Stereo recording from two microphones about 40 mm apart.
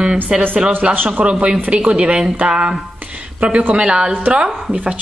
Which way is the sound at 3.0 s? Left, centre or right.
Right.